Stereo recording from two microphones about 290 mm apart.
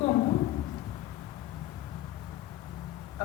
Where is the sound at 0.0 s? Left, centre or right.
Centre.